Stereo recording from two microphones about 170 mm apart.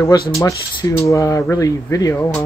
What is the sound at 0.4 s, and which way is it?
Speech, 20° left (ahead or behind).